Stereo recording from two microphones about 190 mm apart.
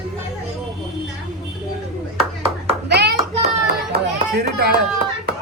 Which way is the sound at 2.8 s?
60° right (ahead or behind).